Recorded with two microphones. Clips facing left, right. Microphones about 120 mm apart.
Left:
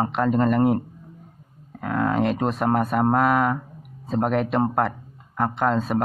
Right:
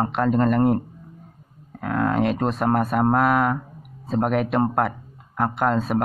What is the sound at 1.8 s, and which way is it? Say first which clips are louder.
Speech: right 1 dB; centre (ahead or behind).